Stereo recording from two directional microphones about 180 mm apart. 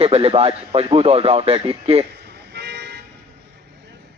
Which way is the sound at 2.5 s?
65° right (ahead or behind).